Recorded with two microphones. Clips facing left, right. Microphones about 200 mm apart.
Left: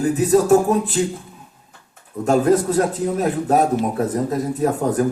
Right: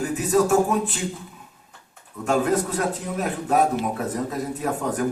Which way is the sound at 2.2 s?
40° left (ahead or behind).